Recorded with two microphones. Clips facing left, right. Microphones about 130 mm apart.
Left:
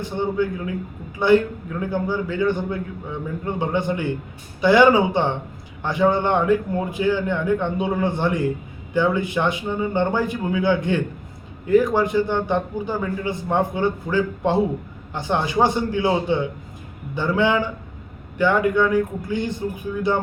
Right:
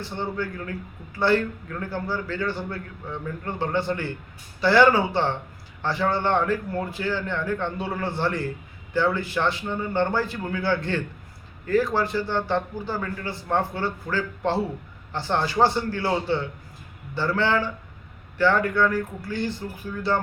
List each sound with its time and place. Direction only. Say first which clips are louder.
0.0 s a man's voice: left 7 dB; 15° left (ahead or behind)